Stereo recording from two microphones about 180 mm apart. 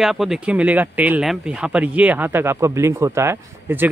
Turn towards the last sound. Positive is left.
turn(degrees=-15)  # may be behind; listen again after turning